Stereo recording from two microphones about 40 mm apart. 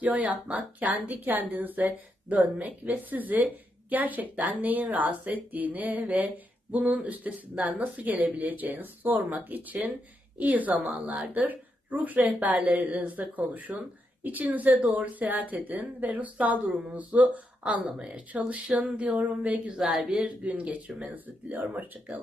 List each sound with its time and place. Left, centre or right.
0.0 s a woman's voice: right
19.7 s speech: centre
20.1 s speech: right
20.4 s a woman's voice: right